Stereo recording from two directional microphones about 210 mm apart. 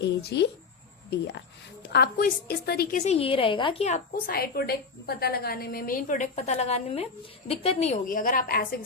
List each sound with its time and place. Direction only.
0.0 s a woman's voice: 55° left (ahead or behind)
3.0 s a woman's voice: 30° left (ahead or behind); by 8.8 s 45° left (ahead or behind)